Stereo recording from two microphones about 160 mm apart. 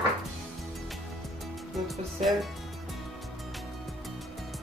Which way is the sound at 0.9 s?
Centre (ahead or behind).